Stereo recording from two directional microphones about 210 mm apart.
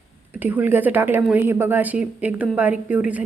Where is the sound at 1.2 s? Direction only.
10° right (ahead or behind).